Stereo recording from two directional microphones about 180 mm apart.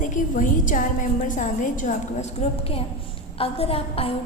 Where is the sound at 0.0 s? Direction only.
45° left (ahead or behind).